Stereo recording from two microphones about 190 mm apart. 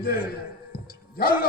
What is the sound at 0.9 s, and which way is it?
Music, 55° left (ahead or behind).